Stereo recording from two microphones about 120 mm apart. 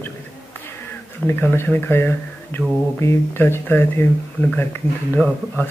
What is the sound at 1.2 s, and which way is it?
Speech, 20° left (ahead or behind).